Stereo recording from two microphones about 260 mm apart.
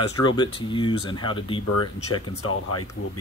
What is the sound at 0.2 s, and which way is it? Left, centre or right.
Speech, centre.